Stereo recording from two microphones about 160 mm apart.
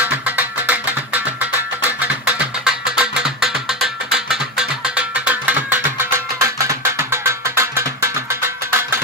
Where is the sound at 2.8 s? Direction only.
5° right (ahead or behind).